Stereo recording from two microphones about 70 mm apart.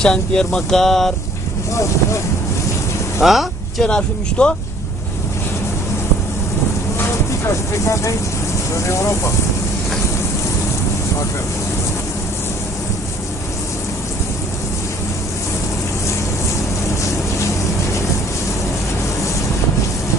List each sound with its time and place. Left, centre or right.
0.0 s speech: centre
3.2 s speech: centre
3.8 s speech: centre
7.0 s a sound: left
8.7 s speech: left